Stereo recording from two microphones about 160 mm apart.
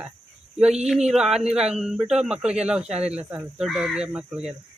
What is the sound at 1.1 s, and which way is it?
Speech, 5° right (ahead or behind).